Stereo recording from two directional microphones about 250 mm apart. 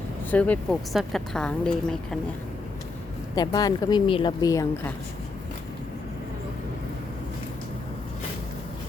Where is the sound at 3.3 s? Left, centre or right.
Centre.